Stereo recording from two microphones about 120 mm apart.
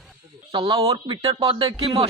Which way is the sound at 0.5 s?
50° right (ahead or behind).